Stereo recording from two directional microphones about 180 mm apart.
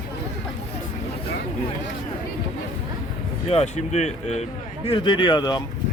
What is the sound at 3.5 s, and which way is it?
Speech, 35° left (ahead or behind).